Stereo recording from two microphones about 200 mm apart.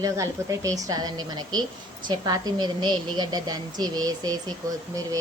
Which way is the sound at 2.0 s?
20° right (ahead or behind).